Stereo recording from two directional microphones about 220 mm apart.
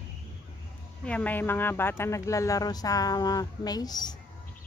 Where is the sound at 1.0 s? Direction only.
5° left (ahead or behind).